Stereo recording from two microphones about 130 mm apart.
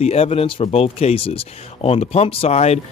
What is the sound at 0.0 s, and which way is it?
Speech, 55° left (ahead or behind).